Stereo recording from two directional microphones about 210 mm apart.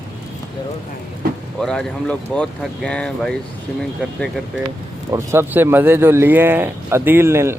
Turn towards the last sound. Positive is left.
turn(degrees=-10)  # may be behind; listen again after turning